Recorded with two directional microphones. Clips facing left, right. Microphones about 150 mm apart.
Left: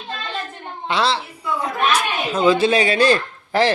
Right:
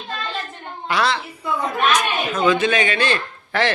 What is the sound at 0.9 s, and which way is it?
A woman's voice, 25° left (ahead or behind).